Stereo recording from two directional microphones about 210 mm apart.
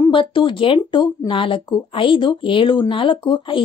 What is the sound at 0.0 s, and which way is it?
Speech, 25° left (ahead or behind).